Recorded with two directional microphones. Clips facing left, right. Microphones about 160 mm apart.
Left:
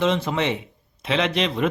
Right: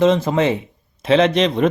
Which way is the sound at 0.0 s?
40° right (ahead or behind).